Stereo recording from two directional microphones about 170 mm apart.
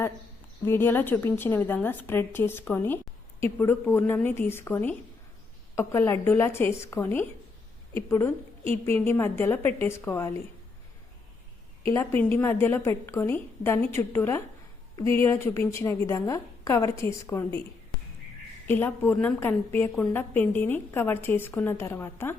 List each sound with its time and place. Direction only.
0.6 s a woman's voice: 15° left (ahead or behind)
8.7 s a woman's voice: 15° left (ahead or behind)
11.9 s a woman's voice: 15° left (ahead or behind)
18.7 s a woman's voice: 10° left (ahead or behind)